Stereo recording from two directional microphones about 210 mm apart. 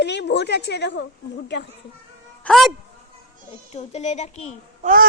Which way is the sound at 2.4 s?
Centre (ahead or behind).